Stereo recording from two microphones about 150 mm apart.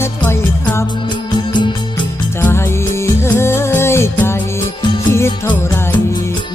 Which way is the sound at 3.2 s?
15° left (ahead or behind).